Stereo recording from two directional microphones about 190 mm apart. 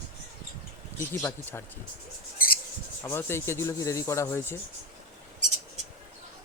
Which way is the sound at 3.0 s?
15° left (ahead or behind).